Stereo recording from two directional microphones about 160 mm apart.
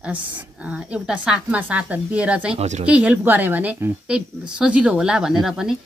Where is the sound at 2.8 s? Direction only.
10° right (ahead or behind).